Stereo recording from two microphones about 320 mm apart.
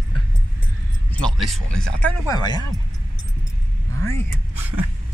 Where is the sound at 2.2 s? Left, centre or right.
Centre.